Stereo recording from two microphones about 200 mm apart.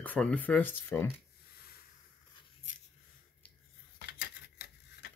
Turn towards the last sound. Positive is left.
turn(degrees=50)  # may be behind; listen again after turning